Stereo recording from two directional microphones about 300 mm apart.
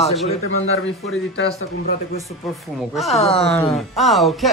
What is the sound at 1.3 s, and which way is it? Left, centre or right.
Speech, left.